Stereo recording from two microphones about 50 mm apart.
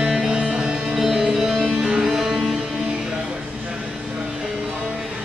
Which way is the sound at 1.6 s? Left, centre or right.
Right.